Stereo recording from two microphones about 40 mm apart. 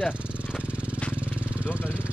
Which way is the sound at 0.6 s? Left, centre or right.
Right.